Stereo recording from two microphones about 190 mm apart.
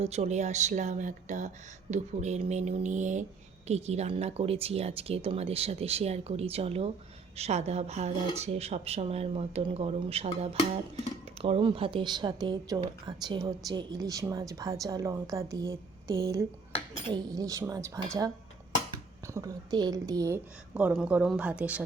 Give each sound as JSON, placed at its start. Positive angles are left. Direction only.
{"t": 0.0, "sound": "a woman's voice", "side_deg": -35}
{"t": 19.3, "sound": "a woman's voice", "side_deg": -20}